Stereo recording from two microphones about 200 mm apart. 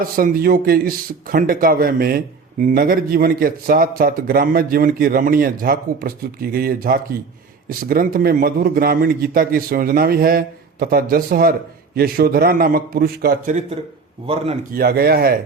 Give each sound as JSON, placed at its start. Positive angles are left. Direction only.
{"t": 0.0, "sound": "speech", "side_deg": -45}
{"t": 14.7, "sound": "speech", "side_deg": -50}